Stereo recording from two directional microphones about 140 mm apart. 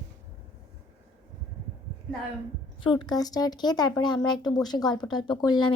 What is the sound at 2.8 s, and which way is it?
A woman's voice, 35° left (ahead or behind).